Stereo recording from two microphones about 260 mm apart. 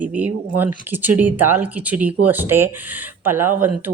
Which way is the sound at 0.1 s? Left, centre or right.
Centre.